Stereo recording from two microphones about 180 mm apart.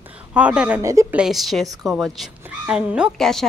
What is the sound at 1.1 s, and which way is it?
Speech, centre (ahead or behind).